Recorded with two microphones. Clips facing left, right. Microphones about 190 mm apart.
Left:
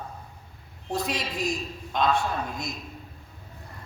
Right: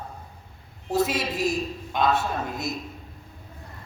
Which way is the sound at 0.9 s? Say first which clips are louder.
Right 5 dB; 5° right (ahead or behind).